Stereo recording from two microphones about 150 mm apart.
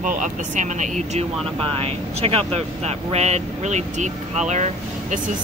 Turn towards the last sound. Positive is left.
turn(degrees=-50)  # may be behind; listen again after turning